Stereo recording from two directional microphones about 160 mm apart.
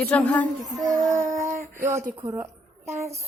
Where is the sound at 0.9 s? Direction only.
20° right (ahead or behind).